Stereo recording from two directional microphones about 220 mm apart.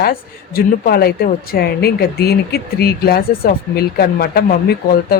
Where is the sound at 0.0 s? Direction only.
45° left (ahead or behind).